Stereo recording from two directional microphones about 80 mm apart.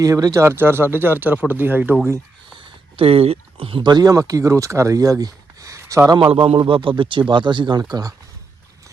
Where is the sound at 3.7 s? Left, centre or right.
Right.